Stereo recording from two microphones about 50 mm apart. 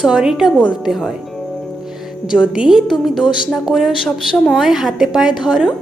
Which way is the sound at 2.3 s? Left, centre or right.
Centre.